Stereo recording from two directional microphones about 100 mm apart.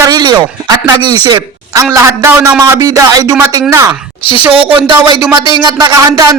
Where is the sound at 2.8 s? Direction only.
40° right (ahead or behind).